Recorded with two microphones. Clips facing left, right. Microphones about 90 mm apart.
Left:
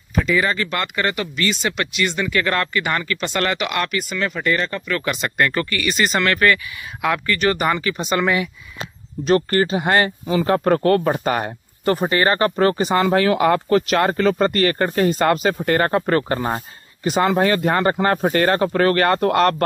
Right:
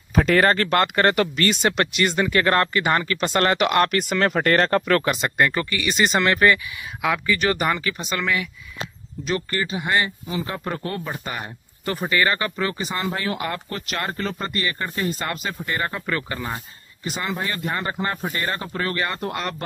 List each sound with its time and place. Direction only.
0.4 s speech: 50° right (ahead or behind)
4.1 s speech: 60° right (ahead or behind)
5.0 s speech: 30° right (ahead or behind)
5.4 s speech: 10° right (ahead or behind)
7.0 s speech: 5° right (ahead or behind)
8.2 s speech: 20° left (ahead or behind)
9.2 s speech: 55° left (ahead or behind)
12.0 s speech: 35° left (ahead or behind); by 16.0 s 65° left (ahead or behind)
16.1 s speech: 45° left (ahead or behind)
17.0 s speech: 80° left
18.3 s speech: 80° left